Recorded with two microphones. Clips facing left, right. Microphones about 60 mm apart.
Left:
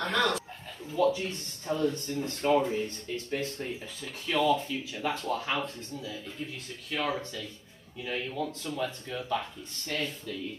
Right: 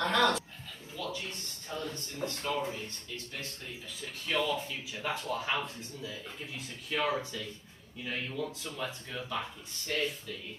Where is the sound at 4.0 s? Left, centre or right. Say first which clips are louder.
Left 4 dB; centre.